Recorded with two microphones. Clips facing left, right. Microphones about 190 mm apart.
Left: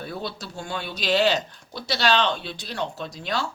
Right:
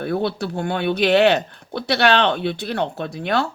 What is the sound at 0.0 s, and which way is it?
Speech, 60° right (ahead or behind).